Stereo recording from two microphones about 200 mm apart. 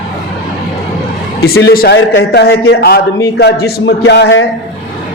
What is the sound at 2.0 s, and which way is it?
Music, 60° left (ahead or behind).